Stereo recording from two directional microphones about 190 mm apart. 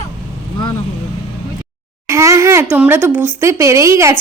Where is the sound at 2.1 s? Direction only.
15° right (ahead or behind).